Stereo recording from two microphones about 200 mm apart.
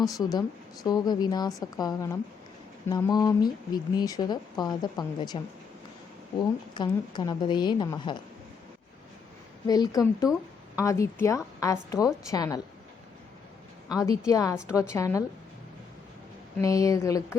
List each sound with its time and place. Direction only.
0.1 s speech: 20° left (ahead or behind)
6.7 s speech: 20° left (ahead or behind)
9.6 s a woman's voice: 20° left (ahead or behind)
14.0 s a woman's voice: 15° left (ahead or behind)
16.6 s a woman's voice: 15° left (ahead or behind)